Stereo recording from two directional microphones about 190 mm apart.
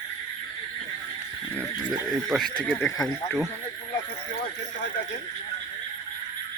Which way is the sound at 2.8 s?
15° left (ahead or behind).